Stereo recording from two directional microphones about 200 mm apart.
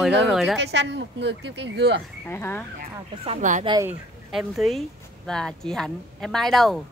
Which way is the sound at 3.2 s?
35° right (ahead or behind).